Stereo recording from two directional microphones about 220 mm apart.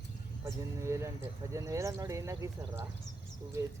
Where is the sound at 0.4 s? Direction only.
15° right (ahead or behind).